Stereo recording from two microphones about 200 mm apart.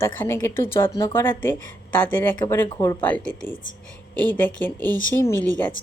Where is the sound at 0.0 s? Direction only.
10° left (ahead or behind).